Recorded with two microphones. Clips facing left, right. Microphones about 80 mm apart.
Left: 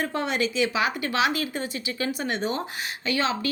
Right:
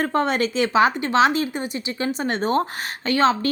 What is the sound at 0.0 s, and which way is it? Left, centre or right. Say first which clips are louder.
Speech: right 5 dB; right.